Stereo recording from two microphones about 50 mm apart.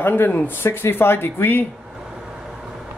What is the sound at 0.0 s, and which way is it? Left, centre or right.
Speech, left.